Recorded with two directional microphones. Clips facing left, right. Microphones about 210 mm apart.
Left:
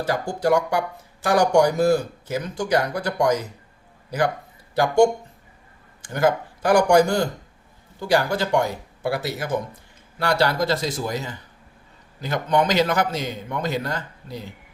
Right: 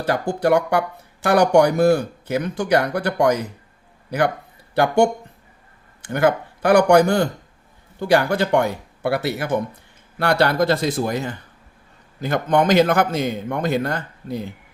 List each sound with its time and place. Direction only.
0.0 s speech: 60° right (ahead or behind)
4.7 s a man's voice: 60° right (ahead or behind)